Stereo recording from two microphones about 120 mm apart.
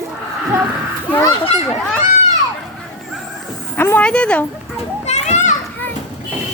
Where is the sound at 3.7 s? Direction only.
15° left (ahead or behind).